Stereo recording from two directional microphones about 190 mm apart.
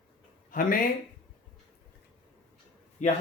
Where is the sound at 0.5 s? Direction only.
45° left (ahead or behind).